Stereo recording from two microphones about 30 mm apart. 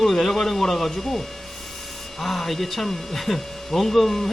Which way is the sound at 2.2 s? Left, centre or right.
Centre.